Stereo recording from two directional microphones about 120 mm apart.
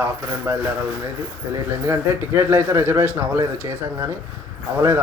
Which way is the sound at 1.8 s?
20° right (ahead or behind).